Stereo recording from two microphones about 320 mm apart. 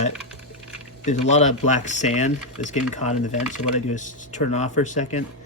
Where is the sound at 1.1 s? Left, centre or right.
Left.